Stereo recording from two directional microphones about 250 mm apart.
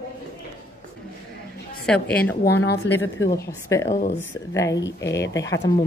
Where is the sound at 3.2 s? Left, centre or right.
Centre.